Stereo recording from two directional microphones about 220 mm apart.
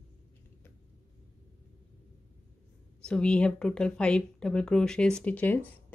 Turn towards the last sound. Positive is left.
turn(degrees=5)  # may be behind; listen again after turning